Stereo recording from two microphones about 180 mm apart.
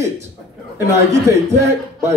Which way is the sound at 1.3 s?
15° right (ahead or behind).